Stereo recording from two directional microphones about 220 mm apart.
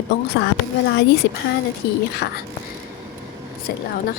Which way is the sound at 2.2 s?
50° left (ahead or behind).